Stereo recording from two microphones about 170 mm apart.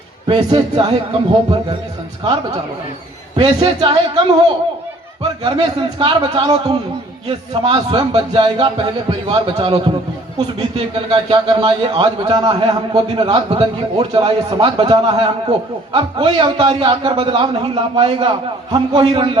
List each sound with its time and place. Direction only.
0.3 s a man's voice: 30° right (ahead or behind)
5.4 s a man's voice: 30° right (ahead or behind)